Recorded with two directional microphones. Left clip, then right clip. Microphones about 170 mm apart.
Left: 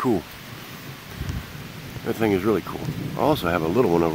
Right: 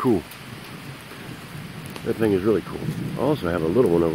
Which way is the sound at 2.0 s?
15° left (ahead or behind).